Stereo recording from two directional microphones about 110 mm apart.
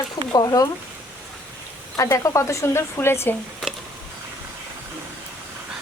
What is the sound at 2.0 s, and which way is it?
Speech, 30° left (ahead or behind).